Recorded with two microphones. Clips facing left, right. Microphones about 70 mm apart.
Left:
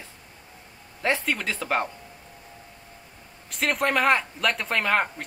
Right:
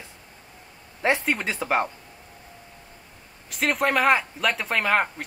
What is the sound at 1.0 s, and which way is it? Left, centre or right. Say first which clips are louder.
Speech: right 2 dB; right.